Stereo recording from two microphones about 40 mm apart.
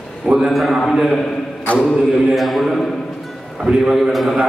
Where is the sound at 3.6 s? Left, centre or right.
Centre.